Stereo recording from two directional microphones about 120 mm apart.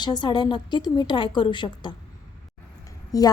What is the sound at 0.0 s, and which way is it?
A woman's voice, 35° left (ahead or behind).